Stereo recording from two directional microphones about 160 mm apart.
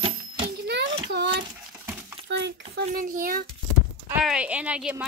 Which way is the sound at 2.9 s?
60° right (ahead or behind).